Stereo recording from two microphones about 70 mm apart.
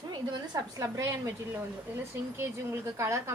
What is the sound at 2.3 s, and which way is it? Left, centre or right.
A woman's voice, right.